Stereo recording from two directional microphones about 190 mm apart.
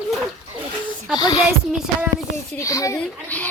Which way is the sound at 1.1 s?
20° left (ahead or behind).